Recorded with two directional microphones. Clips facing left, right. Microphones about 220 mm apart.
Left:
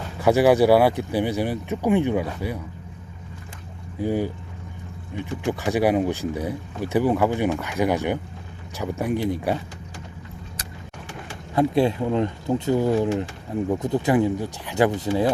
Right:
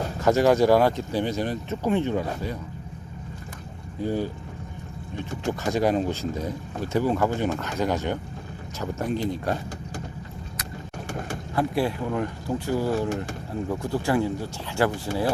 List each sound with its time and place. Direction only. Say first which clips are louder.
0.2 s speech: left 3 dB; 15° left (ahead or behind)
4.0 s speech: left 3 dB; 15° left (ahead or behind)
5.5 s speech: left 2 dB; 15° left (ahead or behind)
11.5 s speech: left 5 dB; 20° left (ahead or behind)